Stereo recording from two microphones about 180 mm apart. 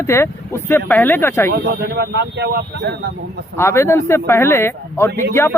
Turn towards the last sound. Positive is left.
turn(degrees=15)  # may be behind; listen again after turning